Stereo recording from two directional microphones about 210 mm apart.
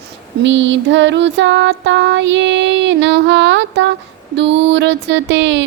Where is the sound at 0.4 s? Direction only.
60° right (ahead or behind).